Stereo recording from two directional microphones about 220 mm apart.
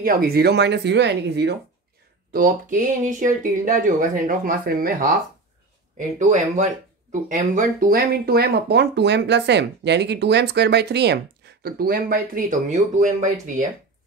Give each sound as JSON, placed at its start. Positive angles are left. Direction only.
{"t": 0.0, "sound": "speech", "side_deg": -45}
{"t": 2.3, "sound": "speech", "side_deg": -35}
{"t": 5.9, "sound": "speech", "side_deg": -35}